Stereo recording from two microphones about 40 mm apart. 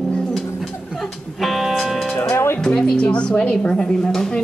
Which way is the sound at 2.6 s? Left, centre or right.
Centre.